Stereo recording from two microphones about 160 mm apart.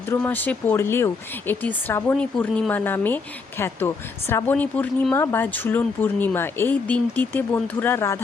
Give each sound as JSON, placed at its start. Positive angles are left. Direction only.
{"t": 0.1, "sound": "speech", "side_deg": 10}